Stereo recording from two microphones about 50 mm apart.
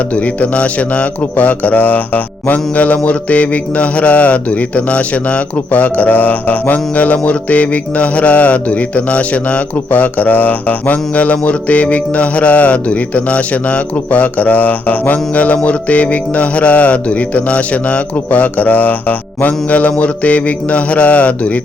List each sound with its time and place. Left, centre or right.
0.2 s a man's voice: left